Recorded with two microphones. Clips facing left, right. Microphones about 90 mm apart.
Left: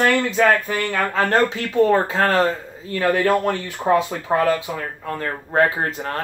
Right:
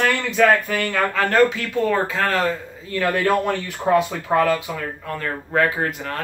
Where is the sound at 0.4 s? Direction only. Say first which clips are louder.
Right 4 dB; 30° left (ahead or behind).